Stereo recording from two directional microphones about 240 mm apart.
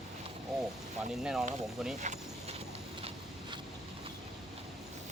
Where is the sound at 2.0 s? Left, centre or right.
Right.